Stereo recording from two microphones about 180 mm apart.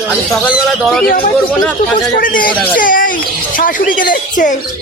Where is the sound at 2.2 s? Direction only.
50° left (ahead or behind).